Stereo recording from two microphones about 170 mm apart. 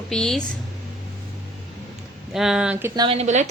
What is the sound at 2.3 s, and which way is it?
Speech, 5° right (ahead or behind).